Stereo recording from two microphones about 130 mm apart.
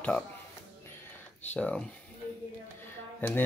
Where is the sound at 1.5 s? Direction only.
10° left (ahead or behind).